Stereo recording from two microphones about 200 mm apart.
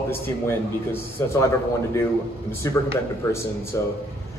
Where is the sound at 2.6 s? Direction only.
15° left (ahead or behind).